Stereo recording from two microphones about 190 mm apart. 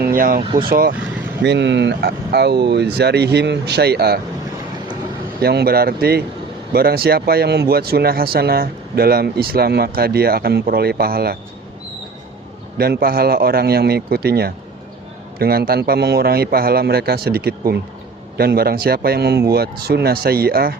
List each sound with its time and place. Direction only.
0.0 s speech: 50° right (ahead or behind)
0.4 s speech: 25° right (ahead or behind)
0.7 s a man's voice: 50° right (ahead or behind)
1.4 s speech: 65° right (ahead or behind)
5.4 s a man's voice: 55° right (ahead or behind)
12.7 s a man's voice: 55° right (ahead or behind)